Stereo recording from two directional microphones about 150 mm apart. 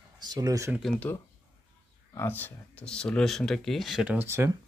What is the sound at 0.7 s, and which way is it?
Speech, centre (ahead or behind).